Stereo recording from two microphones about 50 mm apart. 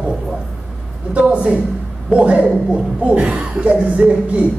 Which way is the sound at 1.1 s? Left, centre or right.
Right.